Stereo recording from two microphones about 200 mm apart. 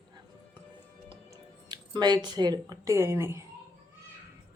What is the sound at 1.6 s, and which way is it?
Speech, 20° right (ahead or behind).